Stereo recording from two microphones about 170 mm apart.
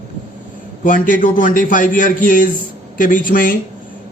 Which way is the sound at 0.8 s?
50° left (ahead or behind).